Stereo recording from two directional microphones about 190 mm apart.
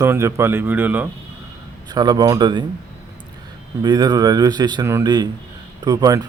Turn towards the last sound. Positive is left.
turn(degrees=-20)  # may be behind; listen again after turning